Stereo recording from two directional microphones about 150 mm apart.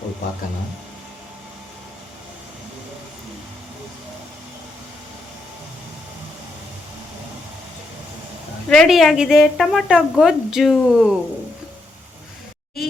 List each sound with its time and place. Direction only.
8.7 s a woman's voice: centre (ahead or behind)